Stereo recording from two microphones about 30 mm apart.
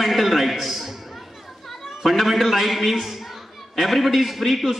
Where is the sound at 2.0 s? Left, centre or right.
Centre.